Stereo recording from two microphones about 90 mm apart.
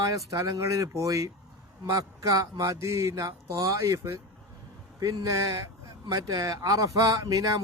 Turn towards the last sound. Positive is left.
turn(degrees=-40)  # may be behind; listen again after turning